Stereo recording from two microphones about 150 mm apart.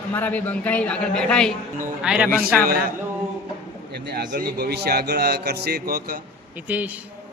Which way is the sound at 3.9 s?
90° right.